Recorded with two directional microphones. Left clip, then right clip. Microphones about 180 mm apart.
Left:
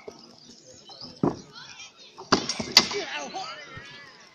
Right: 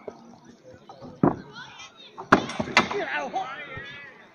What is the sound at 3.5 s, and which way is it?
Basketball bounce, 20° left (ahead or behind).